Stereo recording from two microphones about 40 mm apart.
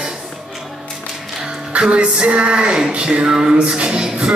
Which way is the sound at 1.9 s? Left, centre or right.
Right.